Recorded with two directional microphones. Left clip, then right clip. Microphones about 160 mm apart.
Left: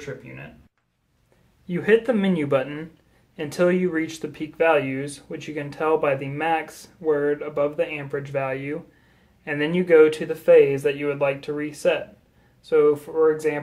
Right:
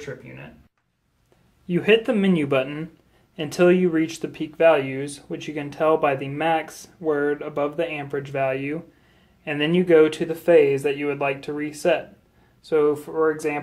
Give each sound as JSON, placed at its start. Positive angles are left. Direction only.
{"t": 0.0, "sound": "speech", "side_deg": 5}
{"t": 1.7, "sound": "speech", "side_deg": -25}